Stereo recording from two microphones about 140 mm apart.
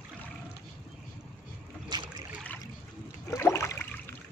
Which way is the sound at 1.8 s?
30° right (ahead or behind).